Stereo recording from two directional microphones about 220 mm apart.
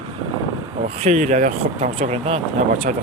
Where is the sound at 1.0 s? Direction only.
35° right (ahead or behind).